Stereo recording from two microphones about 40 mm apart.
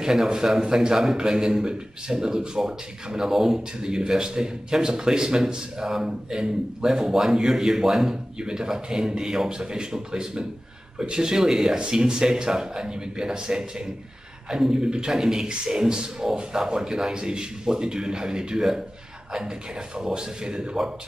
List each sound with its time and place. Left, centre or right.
0.0 s a man's voice: centre
20.0 s speech: centre